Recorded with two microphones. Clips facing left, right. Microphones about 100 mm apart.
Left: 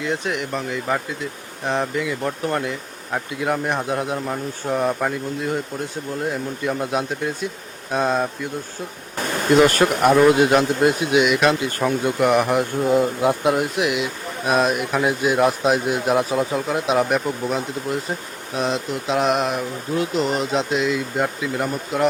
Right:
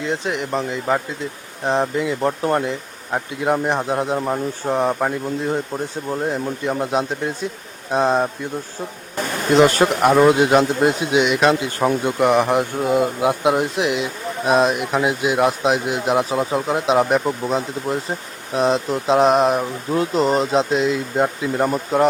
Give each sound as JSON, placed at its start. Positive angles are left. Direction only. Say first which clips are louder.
{"t": 0.0, "sound": "speech", "louder": "right 1 dB", "side_deg": -25}
{"t": 9.6, "sound": "speech", "louder": "right 2 dB", "side_deg": -20}
{"t": 12.8, "sound": "speech", "louder": "left 2 dB", "side_deg": -5}
{"t": 13.6, "sound": "speech", "louder": "right 1 dB", "side_deg": -30}